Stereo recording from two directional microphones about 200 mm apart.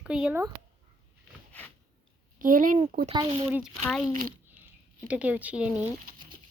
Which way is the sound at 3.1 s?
20° right (ahead or behind).